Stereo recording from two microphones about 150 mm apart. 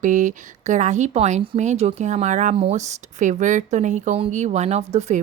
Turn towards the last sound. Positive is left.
turn(degrees=-45)  # may be behind; listen again after turning